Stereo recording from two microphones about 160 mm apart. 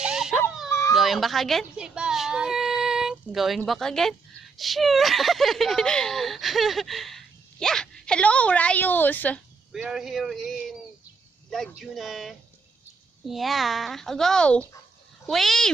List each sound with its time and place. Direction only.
0.0 s dog: 5° right (ahead or behind)
0.7 s children playing: 20° left (ahead or behind)
0.9 s speech: centre (ahead or behind)
9.7 s speech: 5° right (ahead or behind)
11.8 s speech: centre (ahead or behind)